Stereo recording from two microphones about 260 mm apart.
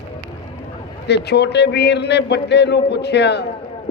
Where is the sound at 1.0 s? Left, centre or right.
Left.